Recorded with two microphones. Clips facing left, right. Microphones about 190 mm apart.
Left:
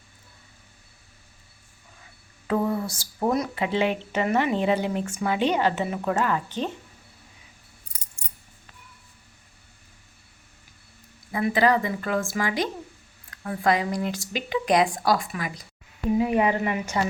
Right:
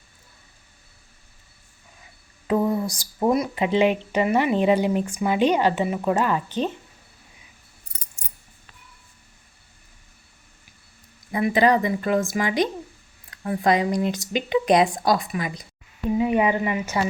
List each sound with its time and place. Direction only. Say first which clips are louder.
2.5 s speech: right 3 dB; 15° right (ahead or behind)
11.3 s speech: right 2 dB; 20° right (ahead or behind)
16.1 s speech: right 2 dB; centre (ahead or behind)